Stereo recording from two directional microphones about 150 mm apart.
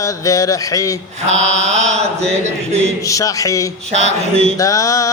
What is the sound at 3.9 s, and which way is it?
Mantra, 45° right (ahead or behind).